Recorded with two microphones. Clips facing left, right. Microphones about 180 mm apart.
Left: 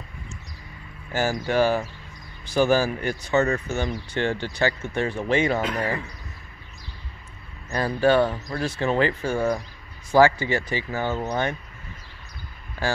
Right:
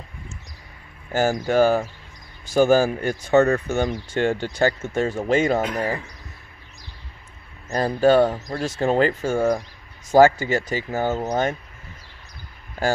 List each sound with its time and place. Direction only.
1.1 s speech: 50° right (ahead or behind)
7.7 s speech: 40° right (ahead or behind)